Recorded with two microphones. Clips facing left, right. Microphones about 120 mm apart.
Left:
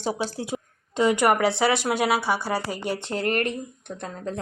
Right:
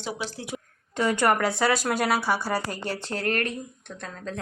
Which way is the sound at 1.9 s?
5° left (ahead or behind).